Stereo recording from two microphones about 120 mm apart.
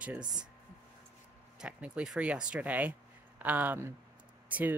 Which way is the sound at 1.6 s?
5° right (ahead or behind).